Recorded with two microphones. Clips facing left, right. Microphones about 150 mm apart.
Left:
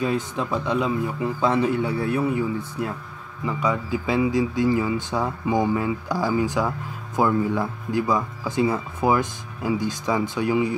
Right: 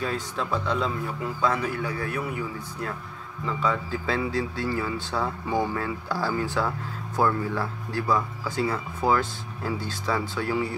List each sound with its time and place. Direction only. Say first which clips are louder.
0.0 s a man's voice: left 5 dB; 15° left (ahead or behind)
3.4 s speech: left 3 dB; 15° left (ahead or behind)